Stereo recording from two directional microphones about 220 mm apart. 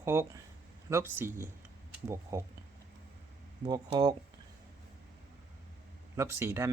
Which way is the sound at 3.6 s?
20° right (ahead or behind).